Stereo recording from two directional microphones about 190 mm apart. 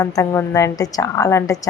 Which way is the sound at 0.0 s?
15° left (ahead or behind).